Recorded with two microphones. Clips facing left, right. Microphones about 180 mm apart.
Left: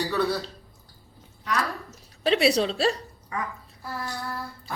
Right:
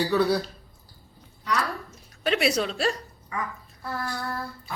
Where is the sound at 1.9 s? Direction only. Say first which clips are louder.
Left 5 dB; 30° left (ahead or behind).